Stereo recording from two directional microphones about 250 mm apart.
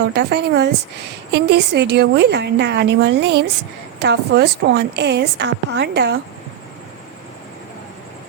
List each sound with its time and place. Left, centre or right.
0.1 s a woman's voice: right